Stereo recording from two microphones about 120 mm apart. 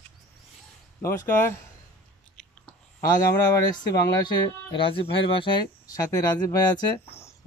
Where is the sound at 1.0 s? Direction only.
20° left (ahead or behind).